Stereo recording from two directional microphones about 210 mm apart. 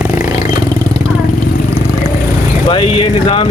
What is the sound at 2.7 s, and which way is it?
Speech, 25° left (ahead or behind).